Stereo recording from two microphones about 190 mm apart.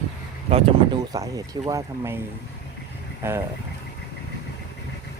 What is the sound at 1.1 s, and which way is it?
Speech, 20° right (ahead or behind).